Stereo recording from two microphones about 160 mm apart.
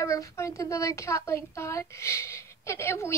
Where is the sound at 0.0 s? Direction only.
20° left (ahead or behind).